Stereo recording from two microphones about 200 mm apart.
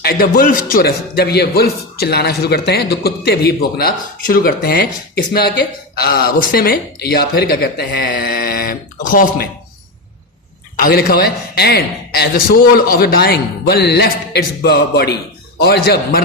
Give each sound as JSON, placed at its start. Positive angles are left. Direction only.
{"t": 0.0, "sound": "speech", "side_deg": 50}
{"t": 10.8, "sound": "speech", "side_deg": 50}